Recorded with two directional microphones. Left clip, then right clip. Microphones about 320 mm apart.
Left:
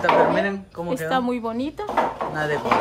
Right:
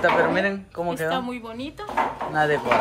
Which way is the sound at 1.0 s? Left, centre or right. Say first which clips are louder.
Left 3 dB; left.